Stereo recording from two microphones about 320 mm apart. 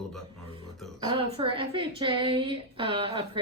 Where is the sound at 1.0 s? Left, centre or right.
Centre.